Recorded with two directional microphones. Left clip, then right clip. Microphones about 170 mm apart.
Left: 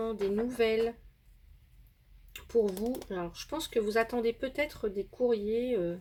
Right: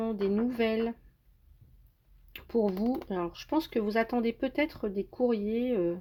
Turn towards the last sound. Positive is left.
turn(degrees=-40)  # may be behind; listen again after turning